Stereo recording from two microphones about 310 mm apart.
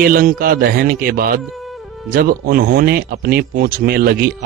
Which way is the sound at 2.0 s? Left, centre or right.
Right.